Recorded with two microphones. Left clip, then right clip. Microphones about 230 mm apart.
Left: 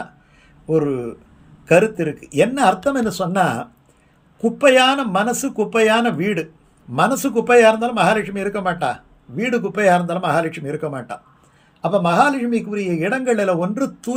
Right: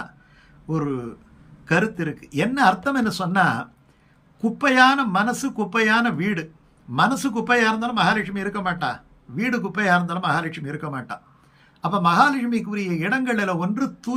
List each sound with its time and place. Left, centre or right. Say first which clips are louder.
1.6 s a man's voice: left 7 dB; centre